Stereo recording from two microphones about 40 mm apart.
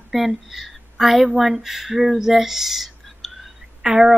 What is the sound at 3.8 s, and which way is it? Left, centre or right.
Speech, centre.